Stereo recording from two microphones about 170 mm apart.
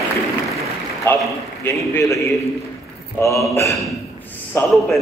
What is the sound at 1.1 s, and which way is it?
A man's voice, 10° left (ahead or behind).